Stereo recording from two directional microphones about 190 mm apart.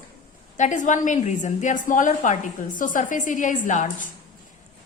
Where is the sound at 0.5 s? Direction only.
40° left (ahead or behind).